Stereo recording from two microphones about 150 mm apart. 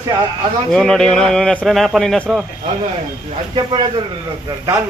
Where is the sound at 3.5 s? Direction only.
30° right (ahead or behind).